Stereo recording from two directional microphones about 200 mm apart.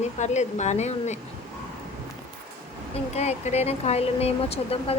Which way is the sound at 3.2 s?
35° left (ahead or behind).